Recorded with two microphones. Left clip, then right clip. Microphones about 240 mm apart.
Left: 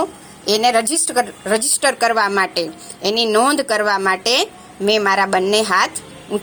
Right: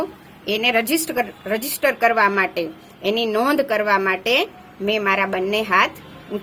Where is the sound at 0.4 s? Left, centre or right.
Left.